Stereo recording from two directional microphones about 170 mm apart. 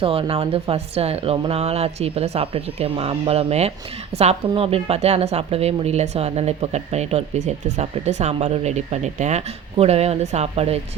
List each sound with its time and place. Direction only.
0.0 s a woman's voice: 35° right (ahead or behind)